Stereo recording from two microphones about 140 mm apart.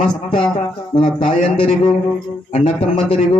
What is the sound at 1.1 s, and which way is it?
A man's voice, 40° left (ahead or behind).